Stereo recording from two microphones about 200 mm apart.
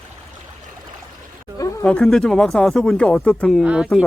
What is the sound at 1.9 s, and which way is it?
Speech, 5° left (ahead or behind).